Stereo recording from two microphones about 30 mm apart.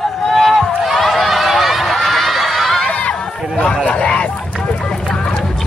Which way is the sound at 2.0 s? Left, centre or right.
Centre.